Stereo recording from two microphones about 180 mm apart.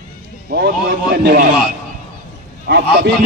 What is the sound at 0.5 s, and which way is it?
Speech, 65° right (ahead or behind).